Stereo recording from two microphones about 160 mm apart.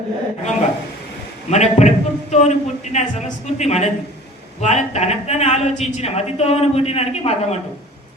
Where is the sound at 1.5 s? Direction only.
45° left (ahead or behind).